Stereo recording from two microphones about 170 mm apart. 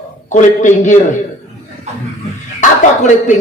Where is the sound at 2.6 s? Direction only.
45° left (ahead or behind).